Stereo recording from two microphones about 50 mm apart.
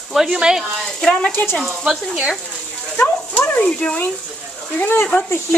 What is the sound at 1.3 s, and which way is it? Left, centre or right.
Frying, left.